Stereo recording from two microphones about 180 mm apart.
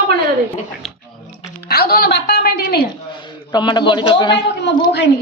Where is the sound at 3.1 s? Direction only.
25° left (ahead or behind).